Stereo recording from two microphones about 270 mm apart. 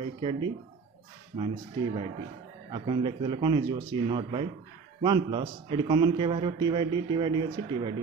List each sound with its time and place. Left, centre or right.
0.0 s speech: centre
2.7 s a man's voice: centre